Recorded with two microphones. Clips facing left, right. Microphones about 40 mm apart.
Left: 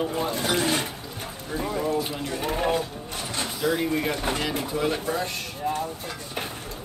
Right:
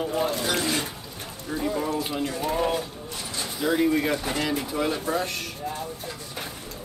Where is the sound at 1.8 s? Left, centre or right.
Centre.